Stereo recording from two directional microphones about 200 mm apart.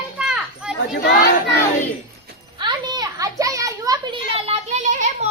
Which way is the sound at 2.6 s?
20° right (ahead or behind).